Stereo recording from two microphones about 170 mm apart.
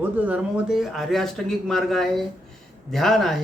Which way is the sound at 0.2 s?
10° right (ahead or behind).